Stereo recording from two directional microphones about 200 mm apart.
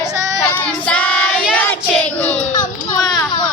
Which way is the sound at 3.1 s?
20° left (ahead or behind).